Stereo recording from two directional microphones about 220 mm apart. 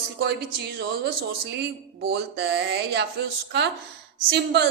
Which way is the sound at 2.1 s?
50° right (ahead or behind).